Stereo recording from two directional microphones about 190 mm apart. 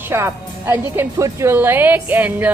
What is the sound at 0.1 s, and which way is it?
A woman's voice, 15° right (ahead or behind).